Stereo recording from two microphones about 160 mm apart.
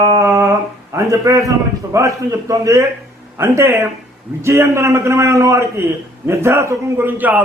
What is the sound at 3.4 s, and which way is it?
Speech, 15° right (ahead or behind).